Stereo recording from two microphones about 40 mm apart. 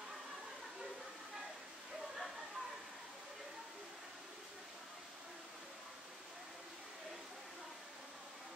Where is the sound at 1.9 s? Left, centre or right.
Centre.